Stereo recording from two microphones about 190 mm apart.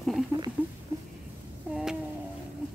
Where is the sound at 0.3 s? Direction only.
15° right (ahead or behind).